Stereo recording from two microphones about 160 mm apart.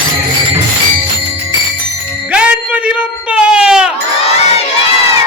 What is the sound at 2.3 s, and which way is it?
Jingle bell, 5° right (ahead or behind).